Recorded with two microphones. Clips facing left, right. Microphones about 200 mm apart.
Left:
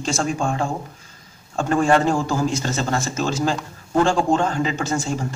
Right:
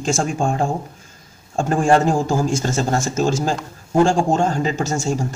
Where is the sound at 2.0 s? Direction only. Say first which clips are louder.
Right 2 dB; 45° right (ahead or behind).